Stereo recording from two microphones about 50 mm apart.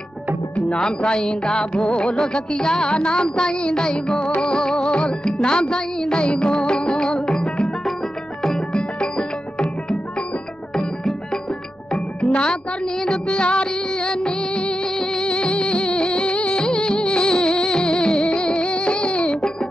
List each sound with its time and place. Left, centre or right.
0.6 s music: centre
8.7 s music: centre
10.7 s music: centre
12.2 s music: left